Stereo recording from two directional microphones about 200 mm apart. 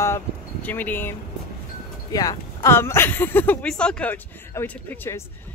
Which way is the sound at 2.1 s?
15° left (ahead or behind).